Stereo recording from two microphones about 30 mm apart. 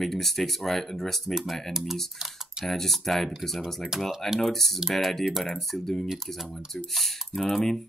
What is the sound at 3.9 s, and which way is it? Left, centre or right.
Speech, centre.